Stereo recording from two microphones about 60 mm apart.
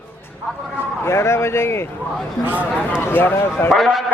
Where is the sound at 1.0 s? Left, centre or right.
Left.